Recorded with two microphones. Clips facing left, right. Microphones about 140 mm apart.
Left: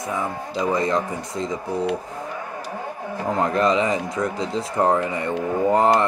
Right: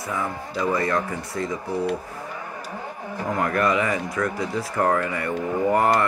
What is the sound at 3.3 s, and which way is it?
Speech, 25° left (ahead or behind).